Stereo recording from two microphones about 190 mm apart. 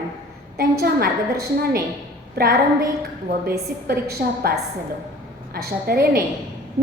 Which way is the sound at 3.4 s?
55° right (ahead or behind).